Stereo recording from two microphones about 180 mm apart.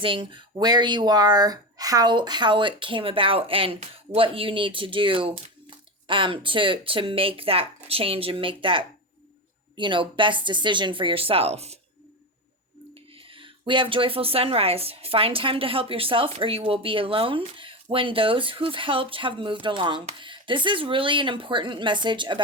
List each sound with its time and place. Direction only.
0.0 s speech: 25° right (ahead or behind)
13.3 s speech: 30° right (ahead or behind)